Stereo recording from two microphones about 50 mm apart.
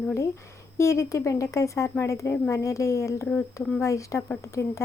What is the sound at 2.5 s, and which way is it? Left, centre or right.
A woman's voice, left.